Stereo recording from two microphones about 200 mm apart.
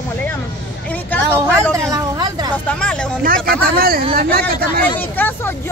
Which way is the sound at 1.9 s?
20° right (ahead or behind).